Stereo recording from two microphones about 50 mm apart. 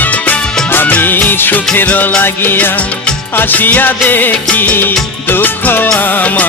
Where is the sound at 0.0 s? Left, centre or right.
Left.